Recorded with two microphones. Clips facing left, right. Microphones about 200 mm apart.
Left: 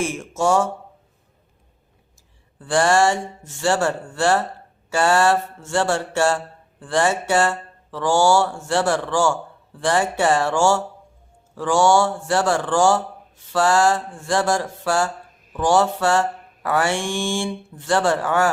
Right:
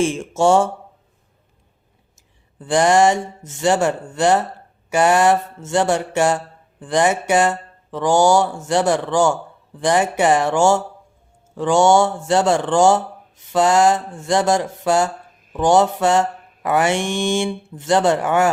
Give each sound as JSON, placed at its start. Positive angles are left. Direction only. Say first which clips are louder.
{"t": 0.0, "sound": "speech", "louder": "right 5 dB", "side_deg": -25}
{"t": 2.6, "sound": "speech", "louder": "right 3 dB", "side_deg": -20}